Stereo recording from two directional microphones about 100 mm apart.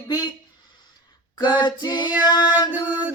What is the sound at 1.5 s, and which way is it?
Female singing, 45° left (ahead or behind).